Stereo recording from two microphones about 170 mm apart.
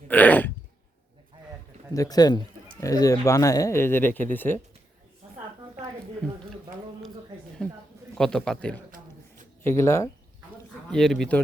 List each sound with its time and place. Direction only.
0.1 s throat clearing: 10° left (ahead or behind)
1.9 s speech: 20° left (ahead or behind)
7.6 s a sound: 5° left (ahead or behind)
8.2 s a man's voice: centre (ahead or behind)
9.6 s speech: 15° left (ahead or behind)
10.9 s a man's voice: centre (ahead or behind)